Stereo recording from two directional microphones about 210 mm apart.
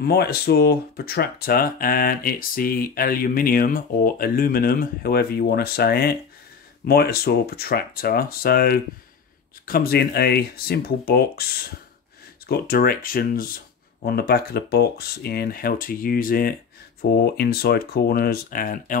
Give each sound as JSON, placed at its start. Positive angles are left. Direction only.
{"t": 0.0, "sound": "speech", "side_deg": 50}
{"t": 12.4, "sound": "speech", "side_deg": 45}